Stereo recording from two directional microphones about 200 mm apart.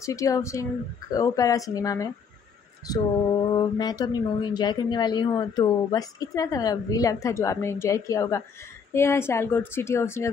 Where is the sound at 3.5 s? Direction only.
20° left (ahead or behind).